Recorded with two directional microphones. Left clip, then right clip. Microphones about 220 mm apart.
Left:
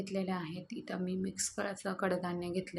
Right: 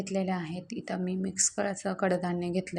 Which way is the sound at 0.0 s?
20° right (ahead or behind).